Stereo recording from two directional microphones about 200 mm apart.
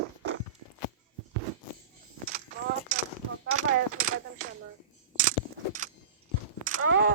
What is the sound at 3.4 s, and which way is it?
Coin, 90° right.